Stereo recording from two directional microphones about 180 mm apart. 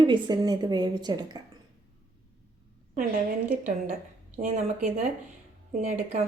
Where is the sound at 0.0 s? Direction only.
25° right (ahead or behind).